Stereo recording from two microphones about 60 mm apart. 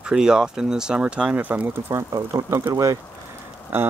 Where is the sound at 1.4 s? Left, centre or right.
Right.